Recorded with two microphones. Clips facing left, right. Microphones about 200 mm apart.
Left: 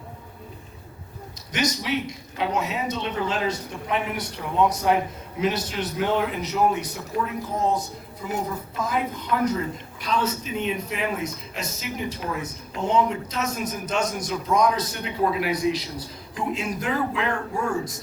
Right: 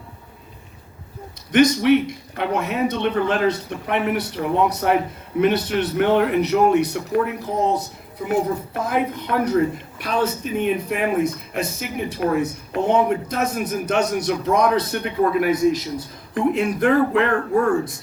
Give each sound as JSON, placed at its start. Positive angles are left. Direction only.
{"t": 1.5, "sound": "speech", "side_deg": -55}